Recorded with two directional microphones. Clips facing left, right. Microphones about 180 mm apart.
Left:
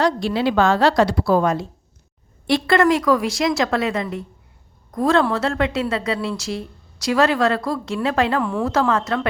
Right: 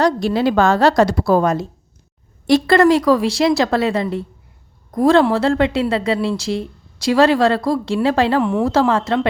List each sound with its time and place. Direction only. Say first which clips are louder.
0.0 s a woman's voice: right 3 dB; 45° right (ahead or behind)